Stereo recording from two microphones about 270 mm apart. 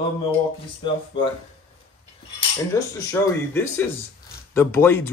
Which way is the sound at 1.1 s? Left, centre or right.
Centre.